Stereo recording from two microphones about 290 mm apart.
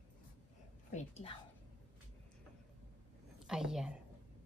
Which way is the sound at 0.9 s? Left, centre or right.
Left.